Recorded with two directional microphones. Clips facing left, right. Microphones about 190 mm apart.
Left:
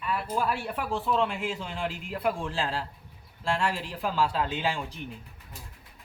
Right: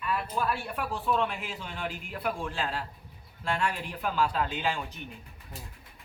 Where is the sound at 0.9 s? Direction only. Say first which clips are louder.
Left 2 dB; 25° left (ahead or behind).